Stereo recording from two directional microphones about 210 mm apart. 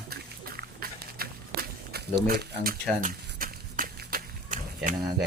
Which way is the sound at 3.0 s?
40° right (ahead or behind).